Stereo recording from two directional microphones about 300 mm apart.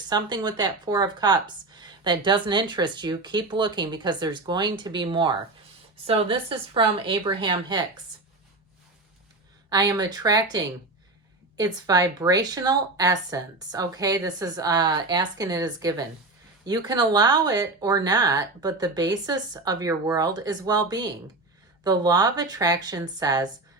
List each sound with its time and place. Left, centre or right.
0.1 s speech: centre
9.6 s speech: centre